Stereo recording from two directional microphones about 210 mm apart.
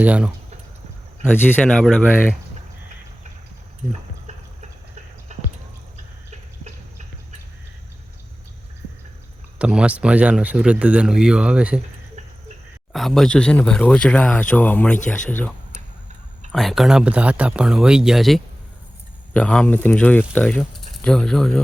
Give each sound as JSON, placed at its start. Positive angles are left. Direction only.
{"t": 0.0, "sound": "speech", "side_deg": -5}
{"t": 1.2, "sound": "speech", "side_deg": 10}
{"t": 5.3, "sound": "basketball bounce", "side_deg": -35}
{"t": 9.6, "sound": "speech", "side_deg": -5}
{"t": 12.9, "sound": "speech", "side_deg": 0}